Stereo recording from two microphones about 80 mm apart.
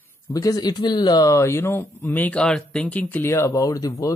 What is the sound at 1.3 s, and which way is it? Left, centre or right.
Speech, left.